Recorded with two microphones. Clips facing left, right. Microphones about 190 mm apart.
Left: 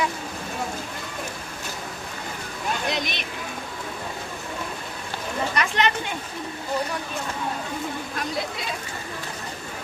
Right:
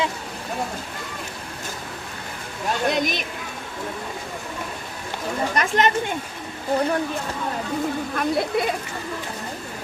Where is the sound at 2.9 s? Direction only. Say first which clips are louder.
Right 5 dB; 45° right (ahead or behind).